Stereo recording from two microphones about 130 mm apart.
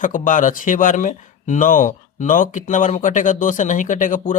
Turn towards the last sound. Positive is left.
turn(degrees=85)